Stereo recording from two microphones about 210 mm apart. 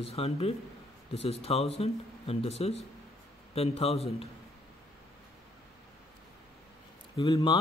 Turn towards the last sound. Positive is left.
turn(degrees=25)  # may be behind; listen again after turning